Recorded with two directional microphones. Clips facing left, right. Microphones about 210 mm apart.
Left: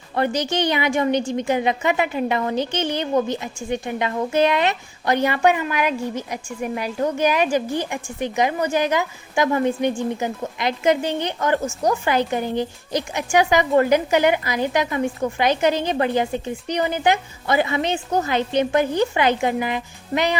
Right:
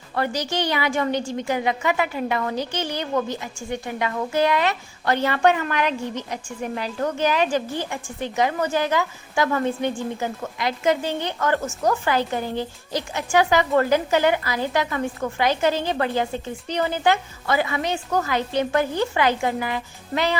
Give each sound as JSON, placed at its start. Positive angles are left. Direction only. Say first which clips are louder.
{"t": 0.2, "sound": "a woman's voice", "louder": "left 3 dB", "side_deg": 20}